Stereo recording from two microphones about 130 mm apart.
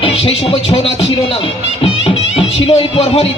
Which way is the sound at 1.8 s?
50° left (ahead or behind).